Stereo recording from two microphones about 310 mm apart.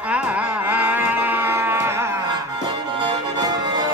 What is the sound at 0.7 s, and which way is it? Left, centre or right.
Cattle, centre.